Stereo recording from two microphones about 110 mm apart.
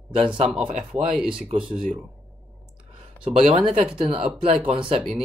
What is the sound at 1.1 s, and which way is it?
Speech, 5° right (ahead or behind).